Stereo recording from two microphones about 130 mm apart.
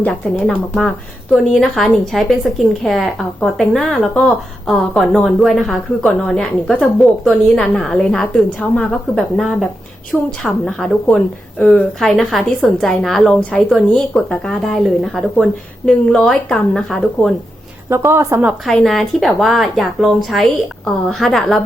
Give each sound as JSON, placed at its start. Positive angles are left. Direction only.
{"t": 0.0, "sound": "a woman's voice", "side_deg": 5}
{"t": 17.8, "sound": "a woman's voice", "side_deg": -20}
{"t": 18.6, "sound": "a woman's voice", "side_deg": 0}